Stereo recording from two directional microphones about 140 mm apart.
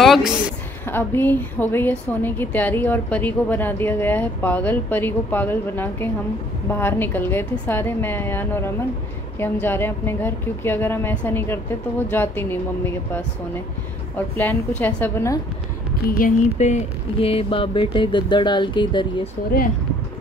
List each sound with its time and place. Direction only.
0.0 s a woman's voice: centre (ahead or behind)
0.8 s a woman's voice: 15° left (ahead or behind)
16.1 s speech: 75° left (ahead or behind); by 19.0 s 35° left (ahead or behind)